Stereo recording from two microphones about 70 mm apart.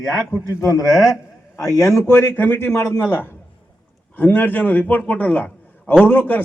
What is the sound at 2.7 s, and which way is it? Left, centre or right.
A man's voice, left.